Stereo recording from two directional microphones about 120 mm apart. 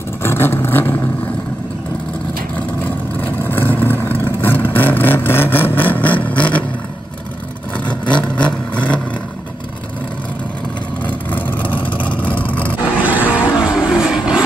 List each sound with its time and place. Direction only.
0.2 s vehicle: 20° left (ahead or behind)
3.2 s vehicle: 15° left (ahead or behind)
7.7 s vehicle: 10° left (ahead or behind)
11.1 s vehicle: 15° left (ahead or behind)
11.6 s vehicle: 45° left (ahead or behind)
12.4 s roar: 15° left (ahead or behind)
13.0 s vehicle: 15° right (ahead or behind)